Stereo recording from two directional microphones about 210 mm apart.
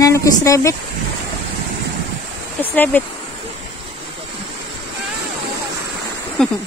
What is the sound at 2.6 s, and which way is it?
Speech, 10° left (ahead or behind).